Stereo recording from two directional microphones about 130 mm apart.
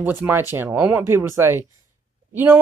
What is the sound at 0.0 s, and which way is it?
Speech, 15° right (ahead or behind).